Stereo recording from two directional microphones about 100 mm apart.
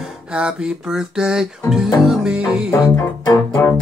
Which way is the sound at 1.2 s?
5° right (ahead or behind).